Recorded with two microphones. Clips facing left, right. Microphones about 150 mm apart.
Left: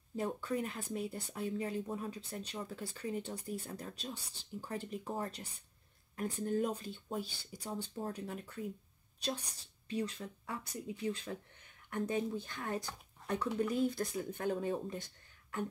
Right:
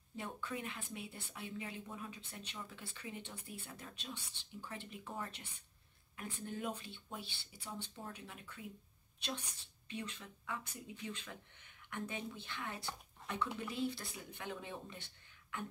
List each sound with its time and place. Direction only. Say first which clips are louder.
0.1 s speech: left 8 dB; 40° left (ahead or behind)